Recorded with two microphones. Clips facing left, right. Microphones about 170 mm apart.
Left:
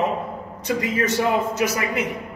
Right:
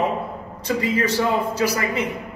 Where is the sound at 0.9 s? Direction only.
20° left (ahead or behind).